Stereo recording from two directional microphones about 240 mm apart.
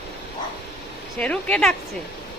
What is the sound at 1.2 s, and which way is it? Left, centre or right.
Speech, centre.